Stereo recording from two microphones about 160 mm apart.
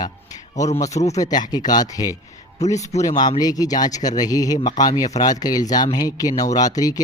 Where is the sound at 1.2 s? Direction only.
25° left (ahead or behind).